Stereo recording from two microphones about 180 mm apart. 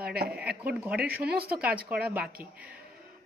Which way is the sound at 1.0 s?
60° right (ahead or behind).